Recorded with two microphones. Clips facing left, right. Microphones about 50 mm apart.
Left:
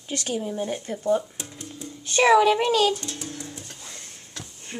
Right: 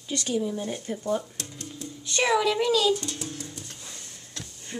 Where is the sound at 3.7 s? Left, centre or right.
Centre.